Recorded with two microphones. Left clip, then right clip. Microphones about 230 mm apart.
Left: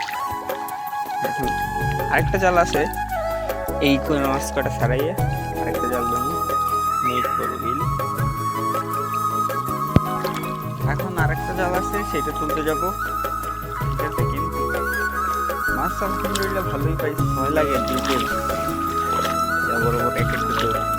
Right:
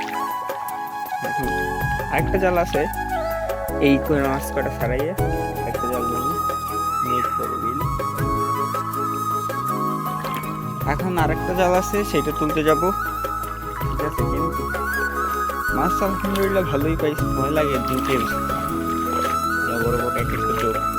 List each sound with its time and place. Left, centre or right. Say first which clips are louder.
2.1 s speech: left 2 dB; centre
11.2 s speech: right 3 dB; right
17.4 s speech: left 1 dB; centre
17.9 s speech: even; left
19.1 s music: right 2 dB; left